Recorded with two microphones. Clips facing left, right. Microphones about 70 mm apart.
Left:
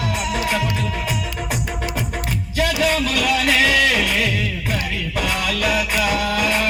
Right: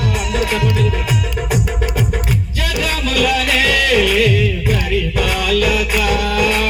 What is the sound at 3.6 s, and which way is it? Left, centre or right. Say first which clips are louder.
Music: right 2 dB; left.